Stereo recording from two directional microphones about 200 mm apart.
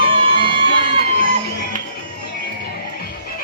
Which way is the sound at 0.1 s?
25° right (ahead or behind).